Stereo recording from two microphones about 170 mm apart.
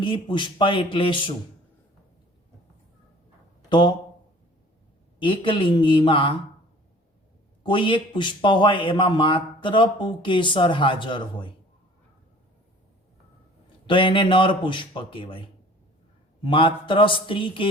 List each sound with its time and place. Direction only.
0.0 s a man's voice: 30° left (ahead or behind)
3.7 s speech: 25° left (ahead or behind)
5.2 s a man's voice: 30° left (ahead or behind)
7.6 s a man's voice: 30° left (ahead or behind)
13.8 s a man's voice: 30° left (ahead or behind)